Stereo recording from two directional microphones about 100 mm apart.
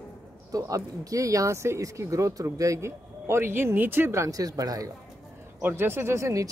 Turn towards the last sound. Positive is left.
turn(degrees=-30)  # may be behind; listen again after turning